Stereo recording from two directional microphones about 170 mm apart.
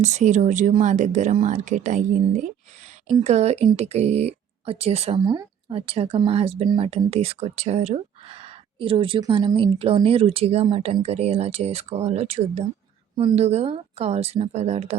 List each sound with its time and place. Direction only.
0.0 s speech: 45° right (ahead or behind)
5.2 s speech: 25° right (ahead or behind)
9.7 s speech: 35° right (ahead or behind)